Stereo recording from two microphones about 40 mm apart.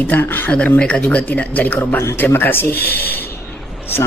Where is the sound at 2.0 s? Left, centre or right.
Left.